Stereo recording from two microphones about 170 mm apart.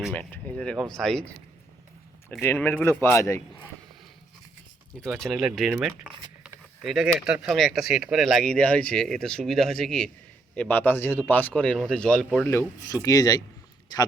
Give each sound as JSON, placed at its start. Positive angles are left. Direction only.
{"t": 0.1, "sound": "speech", "side_deg": 10}
{"t": 2.4, "sound": "speech", "side_deg": 15}
{"t": 4.9, "sound": "speech", "side_deg": 5}